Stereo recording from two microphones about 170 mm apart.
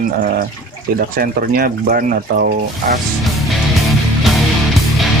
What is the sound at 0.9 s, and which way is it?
Speech, 60° right (ahead or behind).